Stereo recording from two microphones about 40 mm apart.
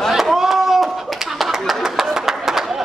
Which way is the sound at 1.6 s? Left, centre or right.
Centre.